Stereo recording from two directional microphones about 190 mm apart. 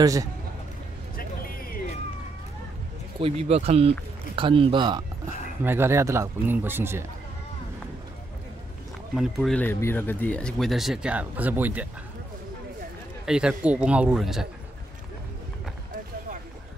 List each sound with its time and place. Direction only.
0.0 s speech: 20° right (ahead or behind)
1.1 s music: 50° left (ahead or behind)
3.2 s speech: 30° right (ahead or behind)
5.6 s speech: 10° right (ahead or behind)
9.1 s speech: centre (ahead or behind)
13.2 s speech: 5° right (ahead or behind)